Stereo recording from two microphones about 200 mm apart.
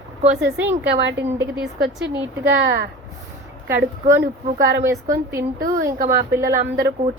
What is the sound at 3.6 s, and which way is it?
A woman's voice, 10° right (ahead or behind).